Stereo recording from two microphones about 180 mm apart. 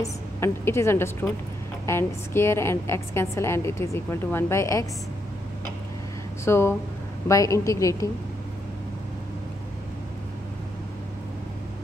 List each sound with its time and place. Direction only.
0.0 s a woman's voice: 15° left (ahead or behind)
6.4 s a woman's voice: 15° left (ahead or behind)